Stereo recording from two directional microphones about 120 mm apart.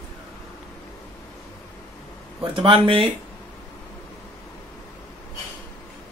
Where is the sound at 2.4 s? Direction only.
45° right (ahead or behind).